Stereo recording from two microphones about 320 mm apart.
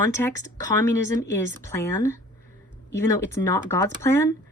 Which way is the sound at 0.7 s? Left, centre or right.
Centre.